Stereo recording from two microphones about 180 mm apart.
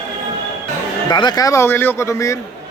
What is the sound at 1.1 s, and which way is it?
Speech, 25° left (ahead or behind).